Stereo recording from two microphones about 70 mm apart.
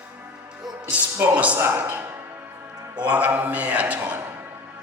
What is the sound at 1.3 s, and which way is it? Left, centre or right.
A man's voice, centre.